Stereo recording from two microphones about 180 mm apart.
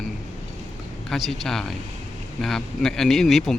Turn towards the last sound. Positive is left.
turn(degrees=0)  # may be behind; listen again after turning